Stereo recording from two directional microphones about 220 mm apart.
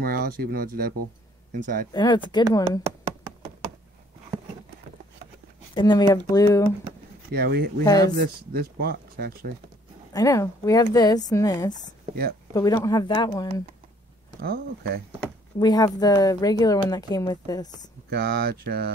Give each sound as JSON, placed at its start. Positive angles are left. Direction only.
{"t": 0.0, "sound": "speech", "side_deg": -40}
{"t": 1.9, "sound": "speech", "side_deg": 20}
{"t": 5.8, "sound": "speech", "side_deg": 20}
{"t": 7.3, "sound": "speech", "side_deg": -45}
{"t": 7.8, "sound": "speech", "side_deg": 15}
{"t": 8.2, "sound": "speech", "side_deg": -45}
{"t": 10.1, "sound": "speech", "side_deg": 15}
{"t": 14.4, "sound": "speech", "side_deg": -45}
{"t": 15.6, "sound": "speech", "side_deg": 15}
{"t": 18.1, "sound": "speech", "side_deg": -45}